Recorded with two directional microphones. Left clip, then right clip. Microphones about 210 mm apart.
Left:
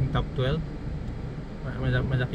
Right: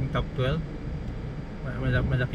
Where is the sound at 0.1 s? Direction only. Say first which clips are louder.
Even; 5° right (ahead or behind).